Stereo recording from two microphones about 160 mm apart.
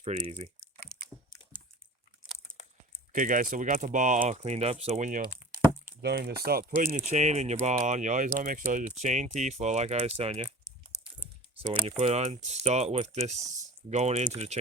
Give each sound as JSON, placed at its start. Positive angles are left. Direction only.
{"t": 0.0, "sound": "typing", "side_deg": -45}
{"t": 3.1, "sound": "speech", "side_deg": -55}
{"t": 6.0, "sound": "speech", "side_deg": -90}
{"t": 11.9, "sound": "speech", "side_deg": -40}